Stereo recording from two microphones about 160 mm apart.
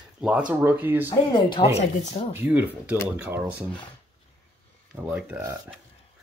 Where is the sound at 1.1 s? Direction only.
30° left (ahead or behind).